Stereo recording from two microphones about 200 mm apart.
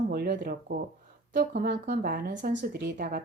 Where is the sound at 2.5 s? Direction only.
55° right (ahead or behind).